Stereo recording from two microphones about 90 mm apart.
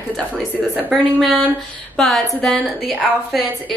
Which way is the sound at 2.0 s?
Centre (ahead or behind).